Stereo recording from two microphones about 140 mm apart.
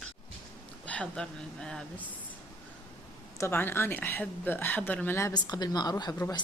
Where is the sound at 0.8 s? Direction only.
10° left (ahead or behind).